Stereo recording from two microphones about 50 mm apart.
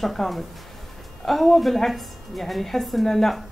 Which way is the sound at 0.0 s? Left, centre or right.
Centre.